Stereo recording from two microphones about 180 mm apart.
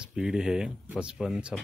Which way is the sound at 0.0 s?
5° right (ahead or behind).